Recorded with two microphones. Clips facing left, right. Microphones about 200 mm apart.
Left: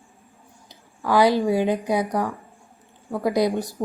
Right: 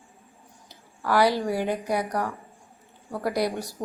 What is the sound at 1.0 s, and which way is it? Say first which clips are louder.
A woman's voice: left 4 dB; 15° left (ahead or behind).